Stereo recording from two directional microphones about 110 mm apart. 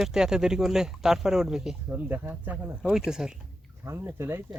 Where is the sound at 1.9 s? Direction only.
15° right (ahead or behind).